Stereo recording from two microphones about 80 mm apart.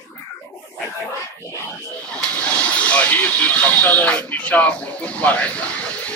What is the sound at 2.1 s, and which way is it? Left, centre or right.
Speech, centre.